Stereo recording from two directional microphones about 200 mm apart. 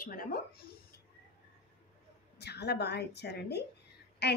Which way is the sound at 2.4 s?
55° left (ahead or behind).